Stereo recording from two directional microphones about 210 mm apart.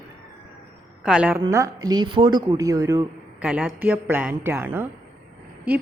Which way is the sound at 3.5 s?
5° right (ahead or behind).